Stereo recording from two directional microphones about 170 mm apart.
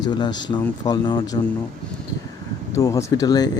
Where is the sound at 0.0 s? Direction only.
25° left (ahead or behind).